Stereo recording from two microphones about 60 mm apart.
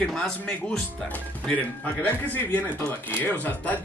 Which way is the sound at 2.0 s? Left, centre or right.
Left.